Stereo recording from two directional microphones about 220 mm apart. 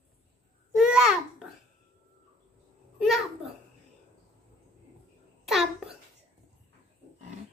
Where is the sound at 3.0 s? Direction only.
Centre (ahead or behind).